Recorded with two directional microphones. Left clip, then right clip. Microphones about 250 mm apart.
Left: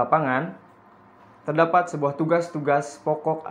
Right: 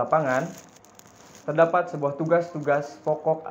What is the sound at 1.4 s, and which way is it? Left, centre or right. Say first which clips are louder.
Speech: left 1 dB; left.